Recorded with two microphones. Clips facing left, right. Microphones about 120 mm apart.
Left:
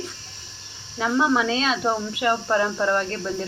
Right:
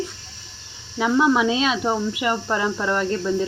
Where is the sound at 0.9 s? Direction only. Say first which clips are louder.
Right 3 dB; 5° right (ahead or behind).